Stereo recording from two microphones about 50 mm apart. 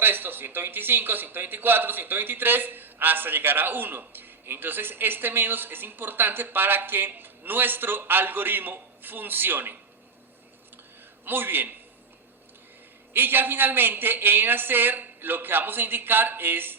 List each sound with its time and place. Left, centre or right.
0.0 s a man's voice: right
11.3 s a man's voice: right
13.1 s a man's voice: right